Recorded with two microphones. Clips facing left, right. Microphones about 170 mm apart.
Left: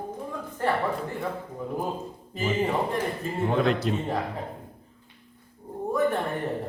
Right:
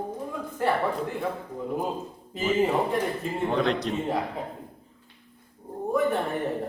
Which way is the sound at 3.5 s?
5° left (ahead or behind).